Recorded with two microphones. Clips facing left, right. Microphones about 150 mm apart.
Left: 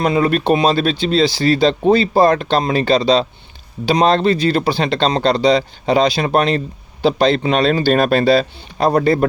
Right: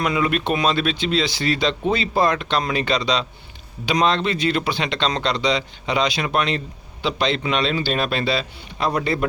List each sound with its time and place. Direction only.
0.0 s speech: 35° left (ahead or behind)